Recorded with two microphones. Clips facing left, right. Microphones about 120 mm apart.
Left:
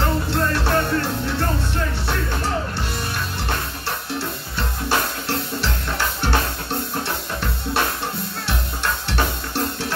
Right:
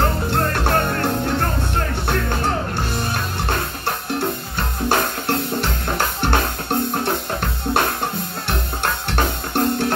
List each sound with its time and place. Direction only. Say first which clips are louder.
0.3 s music: right 1 dB; 50° right (ahead or behind)
3.8 s music: right 4 dB; 55° right (ahead or behind)